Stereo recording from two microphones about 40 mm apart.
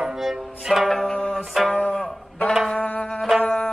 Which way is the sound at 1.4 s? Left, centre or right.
Centre.